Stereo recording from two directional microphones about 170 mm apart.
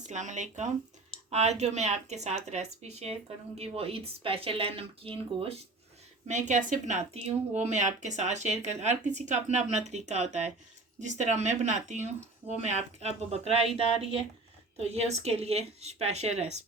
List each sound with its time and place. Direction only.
0.1 s speech: 45° right (ahead or behind)
6.2 s speech: 45° right (ahead or behind)
14.8 s speech: 40° right (ahead or behind)